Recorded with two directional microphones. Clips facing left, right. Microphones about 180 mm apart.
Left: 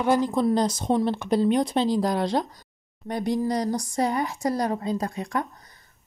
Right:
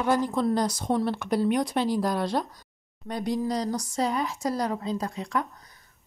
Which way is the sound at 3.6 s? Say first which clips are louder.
Left 3 dB; 15° left (ahead or behind).